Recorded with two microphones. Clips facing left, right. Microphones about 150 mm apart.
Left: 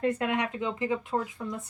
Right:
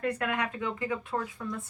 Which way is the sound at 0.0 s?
20° left (ahead or behind).